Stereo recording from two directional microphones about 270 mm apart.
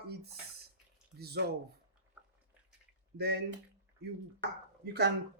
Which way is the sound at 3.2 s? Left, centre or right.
Right.